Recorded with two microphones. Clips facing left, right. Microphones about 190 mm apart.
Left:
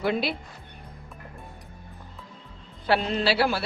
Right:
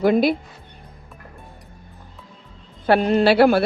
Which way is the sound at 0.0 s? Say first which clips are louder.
Right 9 dB; 45° right (ahead or behind).